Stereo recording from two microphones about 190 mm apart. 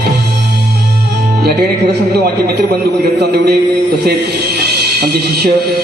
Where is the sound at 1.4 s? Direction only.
60° right (ahead or behind).